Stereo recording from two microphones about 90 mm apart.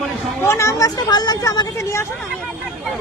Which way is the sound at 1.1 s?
50° left (ahead or behind).